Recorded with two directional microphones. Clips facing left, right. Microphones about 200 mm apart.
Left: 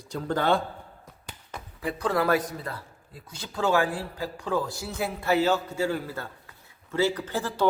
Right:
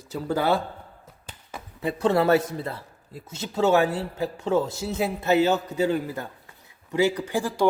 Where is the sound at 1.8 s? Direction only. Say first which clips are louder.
Right 4 dB; 25° right (ahead or behind).